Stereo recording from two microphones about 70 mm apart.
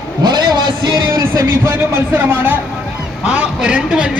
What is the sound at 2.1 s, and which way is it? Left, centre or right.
Speech, right.